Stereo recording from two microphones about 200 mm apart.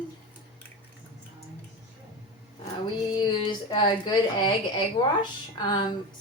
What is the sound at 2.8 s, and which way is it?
A woman's voice, 20° left (ahead or behind).